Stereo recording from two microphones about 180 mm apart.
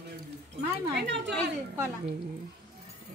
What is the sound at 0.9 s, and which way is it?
Speech, 75° right (ahead or behind).